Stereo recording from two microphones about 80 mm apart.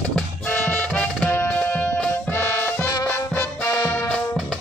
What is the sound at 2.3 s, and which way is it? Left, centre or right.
Music, left.